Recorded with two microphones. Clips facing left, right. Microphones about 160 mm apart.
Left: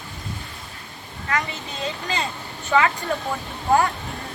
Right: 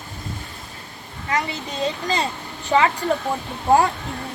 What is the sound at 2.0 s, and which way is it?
Speech, 35° right (ahead or behind).